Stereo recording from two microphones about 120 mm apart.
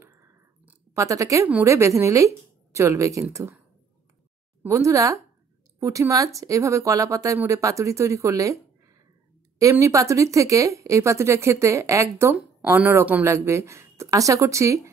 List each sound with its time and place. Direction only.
0.0 s a sound: 25° right (ahead or behind)
0.9 s speech: 25° right (ahead or behind)
4.6 s speech: 25° right (ahead or behind)
9.6 s speech: 25° right (ahead or behind)